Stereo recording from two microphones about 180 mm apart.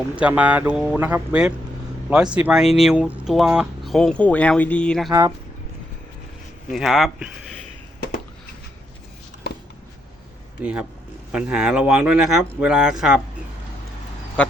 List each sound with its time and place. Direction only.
0.2 s speech: 10° right (ahead or behind)
6.7 s speech: centre (ahead or behind)
10.6 s speech: 5° right (ahead or behind)
14.4 s duck: 5° left (ahead or behind)